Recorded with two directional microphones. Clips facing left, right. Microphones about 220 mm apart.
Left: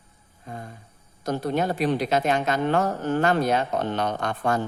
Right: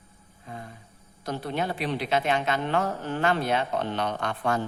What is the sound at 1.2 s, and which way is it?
A woman's voice, 45° left (ahead or behind).